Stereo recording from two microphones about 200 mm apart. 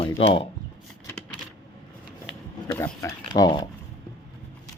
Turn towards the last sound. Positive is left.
turn(degrees=20)  # may be behind; listen again after turning